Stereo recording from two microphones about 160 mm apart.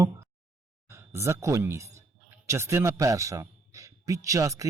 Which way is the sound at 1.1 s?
15° right (ahead or behind).